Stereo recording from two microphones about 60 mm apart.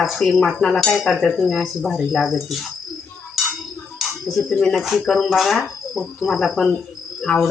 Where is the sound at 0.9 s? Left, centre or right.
Centre.